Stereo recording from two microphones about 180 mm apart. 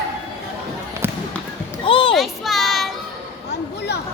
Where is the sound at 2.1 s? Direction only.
Centre (ahead or behind).